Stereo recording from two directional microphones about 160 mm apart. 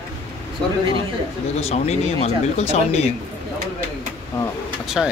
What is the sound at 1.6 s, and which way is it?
Speech, 40° left (ahead or behind).